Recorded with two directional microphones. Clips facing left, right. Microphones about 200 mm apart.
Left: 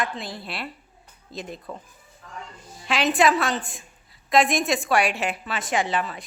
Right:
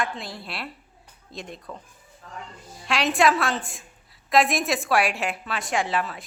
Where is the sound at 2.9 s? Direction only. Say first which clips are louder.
Left 1 dB; centre (ahead or behind).